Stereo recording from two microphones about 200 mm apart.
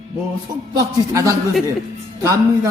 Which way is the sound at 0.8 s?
15° right (ahead or behind).